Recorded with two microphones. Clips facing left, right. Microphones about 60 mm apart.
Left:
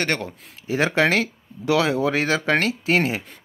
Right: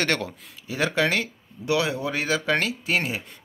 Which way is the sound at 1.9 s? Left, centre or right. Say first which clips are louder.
Left 5 dB; left.